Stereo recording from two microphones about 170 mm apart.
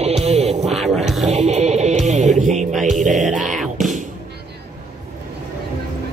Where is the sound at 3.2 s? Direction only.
45° right (ahead or behind).